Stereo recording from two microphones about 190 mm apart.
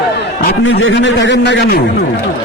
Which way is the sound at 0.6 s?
85° left.